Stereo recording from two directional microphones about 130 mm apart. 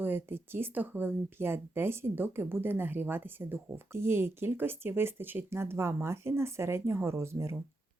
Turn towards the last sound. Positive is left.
turn(degrees=-20)  # may be behind; listen again after turning